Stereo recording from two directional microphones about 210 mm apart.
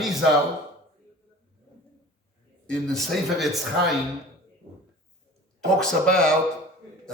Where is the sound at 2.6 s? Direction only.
Centre (ahead or behind).